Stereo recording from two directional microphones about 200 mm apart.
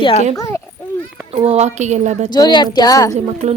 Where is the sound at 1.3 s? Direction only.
30° right (ahead or behind).